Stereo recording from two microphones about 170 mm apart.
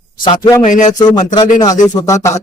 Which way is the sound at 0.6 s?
45° left (ahead or behind).